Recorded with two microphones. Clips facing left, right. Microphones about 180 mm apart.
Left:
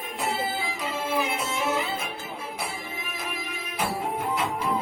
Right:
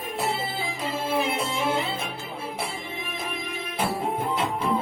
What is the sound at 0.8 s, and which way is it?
Music, 30° right (ahead or behind).